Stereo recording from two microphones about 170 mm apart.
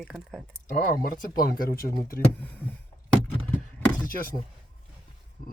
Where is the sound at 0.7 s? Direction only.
55° left (ahead or behind).